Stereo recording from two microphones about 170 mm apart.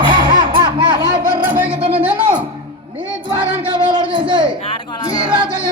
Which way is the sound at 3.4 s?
30° right (ahead or behind).